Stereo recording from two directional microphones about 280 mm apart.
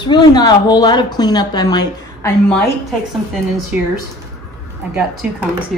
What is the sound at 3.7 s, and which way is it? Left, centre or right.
Speech, centre.